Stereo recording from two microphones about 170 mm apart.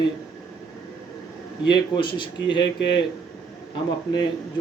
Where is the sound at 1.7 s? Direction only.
30° left (ahead or behind).